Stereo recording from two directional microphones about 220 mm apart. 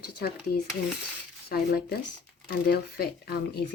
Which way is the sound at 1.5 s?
45° left (ahead or behind).